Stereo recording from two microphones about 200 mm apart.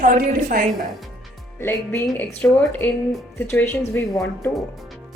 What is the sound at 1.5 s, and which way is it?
Speech, 10° left (ahead or behind).